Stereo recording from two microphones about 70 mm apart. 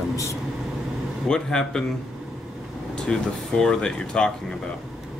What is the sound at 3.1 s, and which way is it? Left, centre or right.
Speech, centre.